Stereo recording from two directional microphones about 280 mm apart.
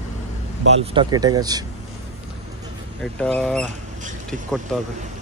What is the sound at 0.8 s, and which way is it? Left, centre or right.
Speech, centre.